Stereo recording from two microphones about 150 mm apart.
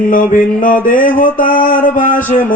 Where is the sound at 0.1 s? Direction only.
65° left (ahead or behind).